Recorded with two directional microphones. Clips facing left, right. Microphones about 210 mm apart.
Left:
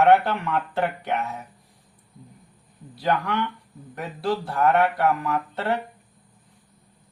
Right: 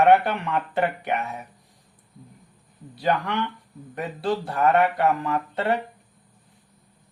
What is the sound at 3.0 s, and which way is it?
Speech, 20° right (ahead or behind).